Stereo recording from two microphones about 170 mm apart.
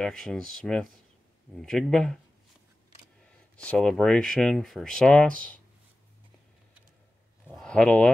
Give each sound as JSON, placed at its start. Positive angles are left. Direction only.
{"t": 0.0, "sound": "speech", "side_deg": 5}
{"t": 3.5, "sound": "speech", "side_deg": 5}
{"t": 7.5, "sound": "speech", "side_deg": 5}